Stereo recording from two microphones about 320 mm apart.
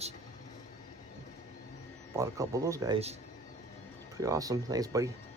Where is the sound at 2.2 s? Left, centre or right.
Centre.